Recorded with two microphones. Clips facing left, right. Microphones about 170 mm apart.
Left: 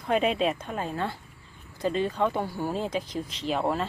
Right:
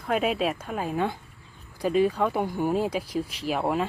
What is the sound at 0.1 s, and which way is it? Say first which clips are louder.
Speech: left 1 dB; 5° right (ahead or behind).